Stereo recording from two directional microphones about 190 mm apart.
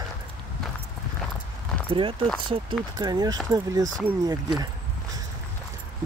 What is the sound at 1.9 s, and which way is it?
Speech, 25° right (ahead or behind).